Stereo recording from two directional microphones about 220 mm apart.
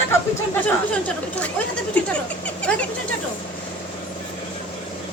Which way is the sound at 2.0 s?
5° left (ahead or behind).